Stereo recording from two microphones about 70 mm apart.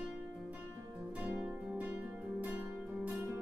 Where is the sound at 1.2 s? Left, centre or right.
Right.